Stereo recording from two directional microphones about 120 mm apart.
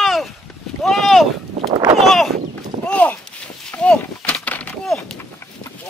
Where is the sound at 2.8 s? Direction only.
10° left (ahead or behind).